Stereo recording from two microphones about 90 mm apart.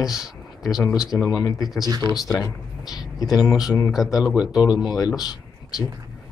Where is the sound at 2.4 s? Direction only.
45° left (ahead or behind).